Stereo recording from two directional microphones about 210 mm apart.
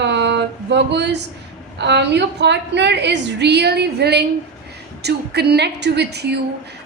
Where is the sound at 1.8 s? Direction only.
55° right (ahead or behind).